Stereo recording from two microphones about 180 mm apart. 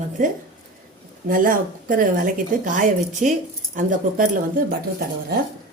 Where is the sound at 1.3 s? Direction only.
50° right (ahead or behind).